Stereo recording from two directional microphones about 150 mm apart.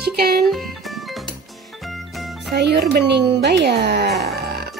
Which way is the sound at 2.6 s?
90° right.